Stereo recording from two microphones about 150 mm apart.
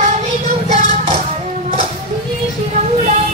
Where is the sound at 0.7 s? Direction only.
60° right (ahead or behind).